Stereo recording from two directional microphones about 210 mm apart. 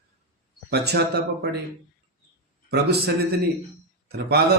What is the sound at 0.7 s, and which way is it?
Speech, 50° right (ahead or behind).